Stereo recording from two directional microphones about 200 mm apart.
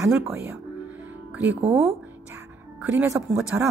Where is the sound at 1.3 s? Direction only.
10° right (ahead or behind).